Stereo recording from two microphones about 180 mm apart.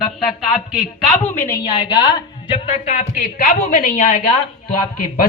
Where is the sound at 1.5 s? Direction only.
20° left (ahead or behind).